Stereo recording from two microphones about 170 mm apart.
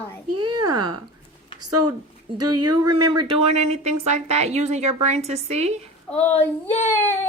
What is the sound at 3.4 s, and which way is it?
Speech, 40° right (ahead or behind).